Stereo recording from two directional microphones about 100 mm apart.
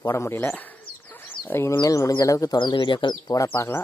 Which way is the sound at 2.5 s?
55° left (ahead or behind).